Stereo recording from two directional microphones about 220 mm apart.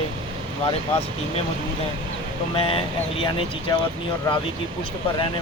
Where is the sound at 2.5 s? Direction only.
25° left (ahead or behind).